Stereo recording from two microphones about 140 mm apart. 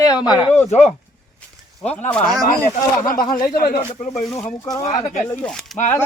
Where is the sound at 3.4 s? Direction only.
90° left.